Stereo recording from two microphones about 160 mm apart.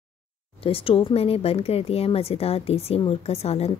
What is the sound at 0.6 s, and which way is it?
Speech, 35° left (ahead or behind).